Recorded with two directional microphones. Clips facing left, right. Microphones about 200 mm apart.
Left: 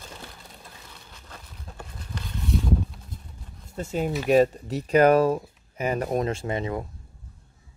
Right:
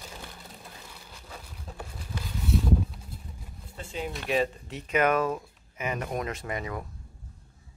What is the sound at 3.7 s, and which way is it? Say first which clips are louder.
Speech: left 8 dB; 45° left (ahead or behind).